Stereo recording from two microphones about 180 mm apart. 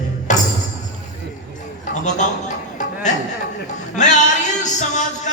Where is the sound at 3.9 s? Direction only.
40° left (ahead or behind).